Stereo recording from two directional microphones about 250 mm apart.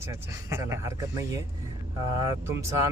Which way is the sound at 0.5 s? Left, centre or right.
Centre.